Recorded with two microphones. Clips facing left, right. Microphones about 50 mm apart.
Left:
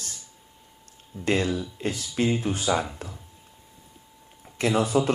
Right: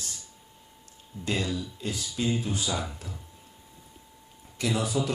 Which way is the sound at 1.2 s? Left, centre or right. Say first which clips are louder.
Left 5 dB; left.